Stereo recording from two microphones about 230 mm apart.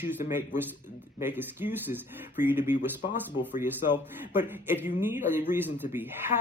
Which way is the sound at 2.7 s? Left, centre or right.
Left.